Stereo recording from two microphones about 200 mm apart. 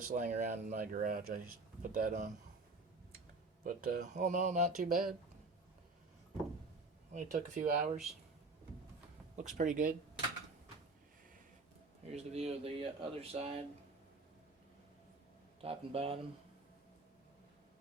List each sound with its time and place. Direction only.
0.1 s speech: 40° right (ahead or behind)
3.6 s speech: 45° right (ahead or behind)
7.1 s speech: 40° right (ahead or behind)
9.3 s speech: 35° right (ahead or behind)
12.1 s speech: 30° right (ahead or behind)
15.6 s speech: 30° right (ahead or behind)